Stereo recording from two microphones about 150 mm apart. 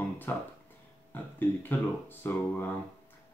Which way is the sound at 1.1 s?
15° left (ahead or behind).